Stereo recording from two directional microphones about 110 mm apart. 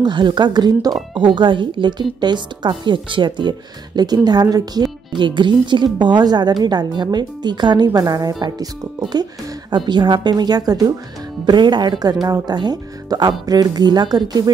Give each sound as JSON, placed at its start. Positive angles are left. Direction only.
{"t": 0.0, "sound": "a woman's voice", "side_deg": -45}